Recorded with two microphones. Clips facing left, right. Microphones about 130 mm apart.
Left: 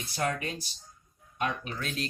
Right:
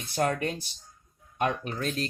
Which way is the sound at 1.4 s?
50° right (ahead or behind).